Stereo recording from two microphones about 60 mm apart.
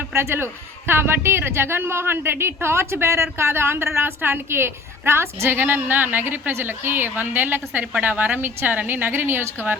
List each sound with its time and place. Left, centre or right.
0.1 s a man's voice: right
5.5 s a woman's voice: right